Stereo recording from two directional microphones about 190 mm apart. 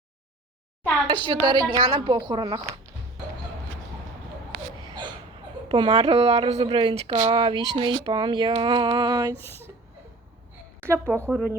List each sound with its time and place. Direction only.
1.0 s speech: 25° right (ahead or behind)
5.6 s speech: 30° right (ahead or behind)
9.3 s speech: 10° left (ahead or behind)
10.8 s a woman's voice: 10° right (ahead or behind)